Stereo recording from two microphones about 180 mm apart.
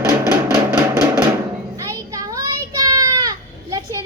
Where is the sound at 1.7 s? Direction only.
20° right (ahead or behind).